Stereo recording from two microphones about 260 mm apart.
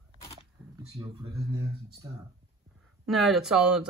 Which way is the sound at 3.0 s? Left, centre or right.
Centre.